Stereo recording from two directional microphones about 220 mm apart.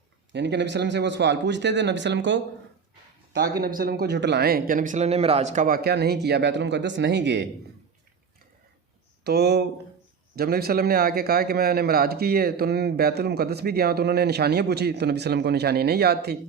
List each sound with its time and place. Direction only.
0.3 s a man's voice: 55° right (ahead or behind)
3.6 s a man's voice: 40° right (ahead or behind)
9.2 s a man's voice: 45° right (ahead or behind)